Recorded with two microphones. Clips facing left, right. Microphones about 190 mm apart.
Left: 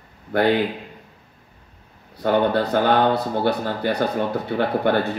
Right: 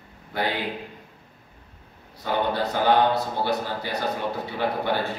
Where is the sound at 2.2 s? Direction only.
60° left (ahead or behind).